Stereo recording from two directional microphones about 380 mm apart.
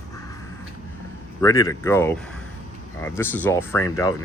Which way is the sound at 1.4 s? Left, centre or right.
Centre.